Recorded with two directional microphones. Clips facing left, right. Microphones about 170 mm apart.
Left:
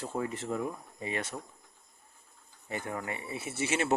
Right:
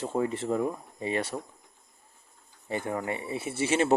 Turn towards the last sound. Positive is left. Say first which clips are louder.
# right 5 dB
turn(degrees=-30)  # may be behind; listen again after turning